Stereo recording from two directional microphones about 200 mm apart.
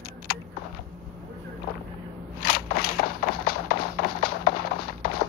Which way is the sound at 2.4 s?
50° left (ahead or behind).